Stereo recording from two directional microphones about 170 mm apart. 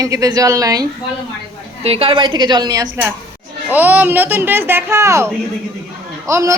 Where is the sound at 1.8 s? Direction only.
35° right (ahead or behind).